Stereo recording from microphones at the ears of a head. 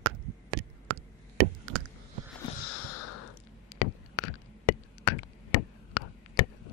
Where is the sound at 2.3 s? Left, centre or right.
Left.